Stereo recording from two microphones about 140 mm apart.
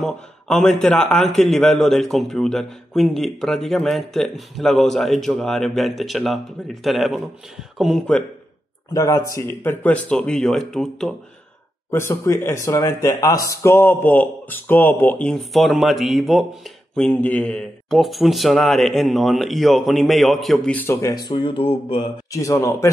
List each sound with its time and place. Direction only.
0.0 s a man's voice: 5° left (ahead or behind)
8.9 s a man's voice: 25° left (ahead or behind); by 11.1 s 5° left (ahead or behind)
11.9 s a man's voice: 20° left (ahead or behind); by 20.7 s centre (ahead or behind)
20.7 s speech: 15° left (ahead or behind); by 22.1 s 40° left (ahead or behind)
22.3 s a man's voice: 20° left (ahead or behind)